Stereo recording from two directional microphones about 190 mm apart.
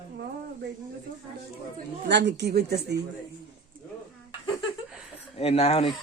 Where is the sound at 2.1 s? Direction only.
65° right (ahead or behind).